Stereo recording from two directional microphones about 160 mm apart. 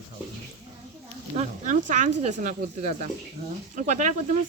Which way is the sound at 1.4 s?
50° right (ahead or behind).